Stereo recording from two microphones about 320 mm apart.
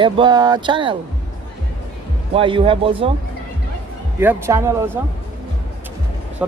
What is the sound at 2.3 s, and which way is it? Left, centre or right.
Speech, centre.